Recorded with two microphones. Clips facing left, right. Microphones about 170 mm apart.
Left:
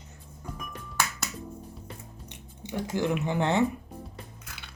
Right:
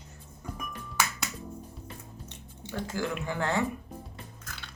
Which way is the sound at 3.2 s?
20° left (ahead or behind).